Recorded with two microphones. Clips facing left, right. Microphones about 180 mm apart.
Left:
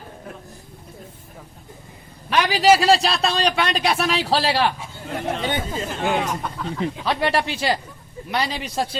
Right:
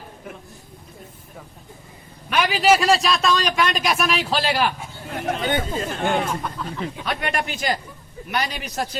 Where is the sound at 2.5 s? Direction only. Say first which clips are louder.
Left 2 dB; 35° left (ahead or behind).